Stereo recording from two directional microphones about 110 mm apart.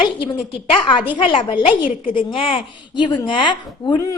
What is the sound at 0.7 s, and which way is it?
A woman's voice, 50° left (ahead or behind).